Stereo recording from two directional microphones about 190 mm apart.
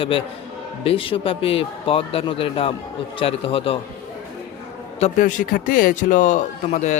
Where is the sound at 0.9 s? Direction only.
30° left (ahead or behind).